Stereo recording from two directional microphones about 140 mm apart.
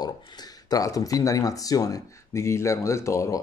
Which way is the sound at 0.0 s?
30° left (ahead or behind).